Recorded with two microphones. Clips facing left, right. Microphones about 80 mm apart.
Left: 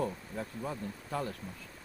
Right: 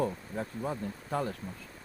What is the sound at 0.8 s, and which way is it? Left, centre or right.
Speech, right.